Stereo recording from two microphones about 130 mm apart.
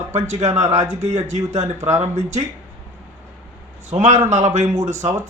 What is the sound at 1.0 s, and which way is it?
Speech, 65° right (ahead or behind).